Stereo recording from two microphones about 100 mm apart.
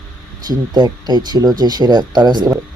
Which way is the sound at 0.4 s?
45° right (ahead or behind).